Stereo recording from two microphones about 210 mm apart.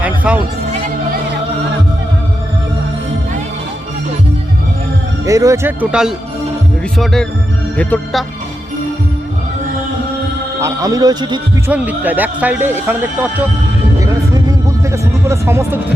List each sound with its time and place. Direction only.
0.0 s music: 5° right (ahead or behind)
5.2 s speech: 15° right (ahead or behind); by 7.3 s centre (ahead or behind)
7.8 s music: 5° left (ahead or behind)
10.6 s speech: 15° right (ahead or behind)
11.7 s speech: 5° right (ahead or behind)
14.0 s music: 15° right (ahead or behind)
14.9 s speech: 15° right (ahead or behind)